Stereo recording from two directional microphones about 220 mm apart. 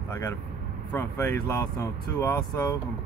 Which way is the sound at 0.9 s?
10° left (ahead or behind).